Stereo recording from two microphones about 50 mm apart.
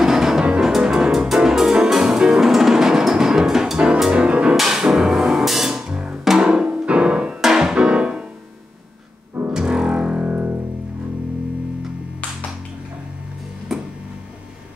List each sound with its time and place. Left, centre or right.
0.0 s music: centre
4.6 s music: centre
9.5 s music: centre
13.7 s tick-tock: centre